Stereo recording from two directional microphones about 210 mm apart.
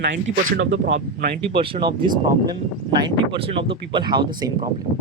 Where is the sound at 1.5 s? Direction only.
25° right (ahead or behind).